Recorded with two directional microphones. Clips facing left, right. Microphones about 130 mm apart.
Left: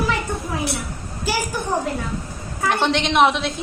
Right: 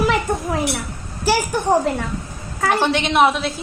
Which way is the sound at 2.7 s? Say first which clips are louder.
Right 1 dB; 5° right (ahead or behind).